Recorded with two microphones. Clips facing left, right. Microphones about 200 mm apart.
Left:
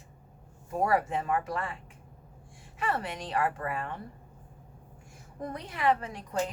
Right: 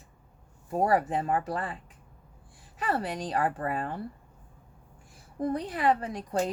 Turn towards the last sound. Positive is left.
turn(degrees=-35)  # may be behind; listen again after turning